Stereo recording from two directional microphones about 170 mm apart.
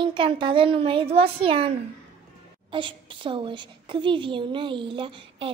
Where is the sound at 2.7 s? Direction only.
30° right (ahead or behind).